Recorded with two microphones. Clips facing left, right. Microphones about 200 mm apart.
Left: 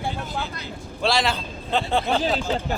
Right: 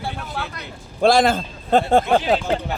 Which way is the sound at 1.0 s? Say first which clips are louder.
Right 8 dB; 50° right (ahead or behind).